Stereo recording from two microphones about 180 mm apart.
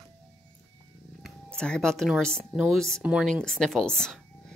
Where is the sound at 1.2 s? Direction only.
5° left (ahead or behind).